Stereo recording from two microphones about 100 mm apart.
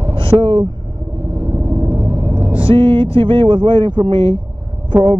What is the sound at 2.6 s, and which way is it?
Speech, 65° right (ahead or behind).